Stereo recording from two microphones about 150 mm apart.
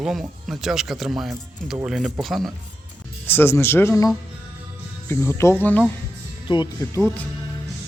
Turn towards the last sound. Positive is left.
turn(degrees=20)  # may be behind; listen again after turning